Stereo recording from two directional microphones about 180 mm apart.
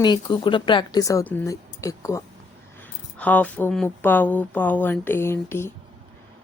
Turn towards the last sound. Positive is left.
turn(degrees=15)  # may be behind; listen again after turning